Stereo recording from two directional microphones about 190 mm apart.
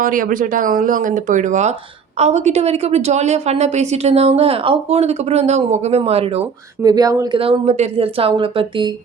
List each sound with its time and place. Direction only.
0.0 s a woman's voice: 45° right (ahead or behind); by 6.9 s 30° right (ahead or behind)
6.9 s speech: 20° right (ahead or behind)
7.3 s speech: 30° right (ahead or behind)